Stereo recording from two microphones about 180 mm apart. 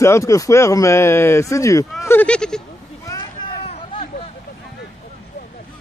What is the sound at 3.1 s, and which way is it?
Vehicle, 25° left (ahead or behind).